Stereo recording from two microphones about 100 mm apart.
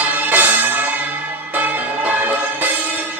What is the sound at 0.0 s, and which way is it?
Music, 15° right (ahead or behind).